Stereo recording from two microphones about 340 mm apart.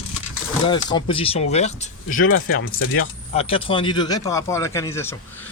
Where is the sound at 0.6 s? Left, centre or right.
Centre.